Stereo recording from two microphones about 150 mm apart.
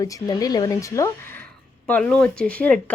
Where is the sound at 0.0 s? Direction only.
25° left (ahead or behind).